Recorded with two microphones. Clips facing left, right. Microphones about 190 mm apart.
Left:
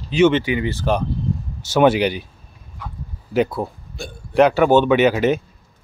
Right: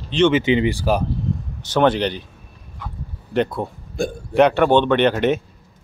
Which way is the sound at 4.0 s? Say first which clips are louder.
Right 11 dB; 50° right (ahead or behind).